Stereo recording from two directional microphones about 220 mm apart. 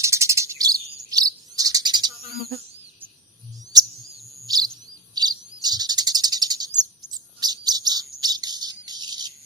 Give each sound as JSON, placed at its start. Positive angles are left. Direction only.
{"t": 0.0, "sound": "chirp", "side_deg": -15}
{"t": 4.4, "sound": "bird vocalization", "side_deg": -15}
{"t": 5.1, "sound": "bird", "side_deg": -20}
{"t": 5.6, "sound": "cricket", "side_deg": -20}
{"t": 7.1, "sound": "bird", "side_deg": -20}